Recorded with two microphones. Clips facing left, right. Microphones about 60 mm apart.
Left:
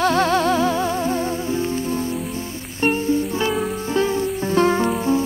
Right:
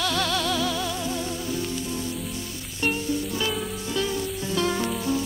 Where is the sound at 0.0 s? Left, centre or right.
Left.